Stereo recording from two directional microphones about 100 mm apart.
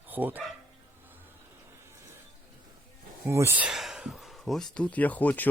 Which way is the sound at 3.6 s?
5° right (ahead or behind).